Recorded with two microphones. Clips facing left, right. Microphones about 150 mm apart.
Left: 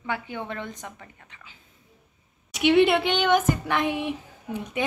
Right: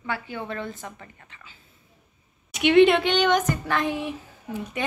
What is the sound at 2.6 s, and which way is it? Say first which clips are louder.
Speech: right 2 dB; 10° left (ahead or behind).